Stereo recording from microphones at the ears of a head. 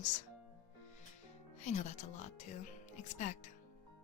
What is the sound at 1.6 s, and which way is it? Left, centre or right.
A woman's voice, left.